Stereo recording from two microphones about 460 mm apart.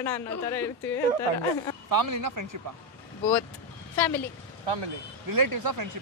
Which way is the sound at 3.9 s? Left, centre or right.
Centre.